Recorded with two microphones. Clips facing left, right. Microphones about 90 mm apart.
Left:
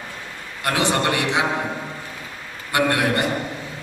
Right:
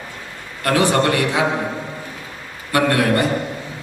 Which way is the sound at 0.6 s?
20° left (ahead or behind).